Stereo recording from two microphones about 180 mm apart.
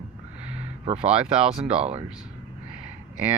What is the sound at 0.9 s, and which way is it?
Speech, 35° right (ahead or behind).